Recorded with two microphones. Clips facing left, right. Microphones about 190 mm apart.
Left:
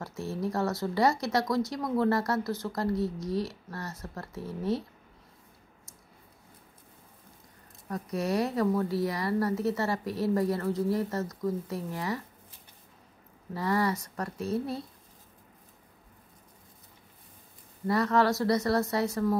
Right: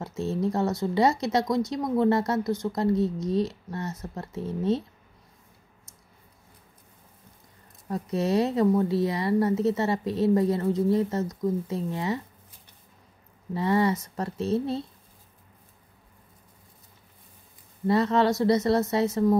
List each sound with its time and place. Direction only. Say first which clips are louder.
0.0 s a woman's voice: right 5 dB; 20° right (ahead or behind)
7.9 s a woman's voice: right 5 dB; 25° right (ahead or behind)
13.5 s a woman's voice: right 5 dB; 25° right (ahead or behind)
17.8 s a woman's voice: right 3 dB; 25° right (ahead or behind)